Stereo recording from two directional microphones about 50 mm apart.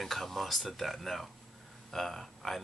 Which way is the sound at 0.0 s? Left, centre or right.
Centre.